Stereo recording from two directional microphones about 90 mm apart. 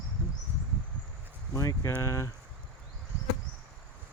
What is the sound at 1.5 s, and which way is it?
Speech, 35° left (ahead or behind).